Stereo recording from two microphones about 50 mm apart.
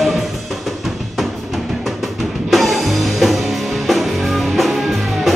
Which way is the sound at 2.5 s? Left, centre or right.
Centre.